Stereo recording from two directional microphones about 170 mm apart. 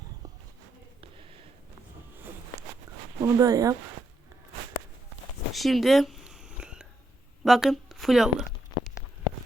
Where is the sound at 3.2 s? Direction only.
20° right (ahead or behind).